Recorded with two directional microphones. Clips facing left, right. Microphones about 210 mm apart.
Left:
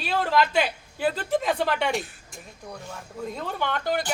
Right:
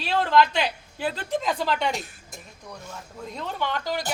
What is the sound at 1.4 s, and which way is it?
Speech, 55° left (ahead or behind).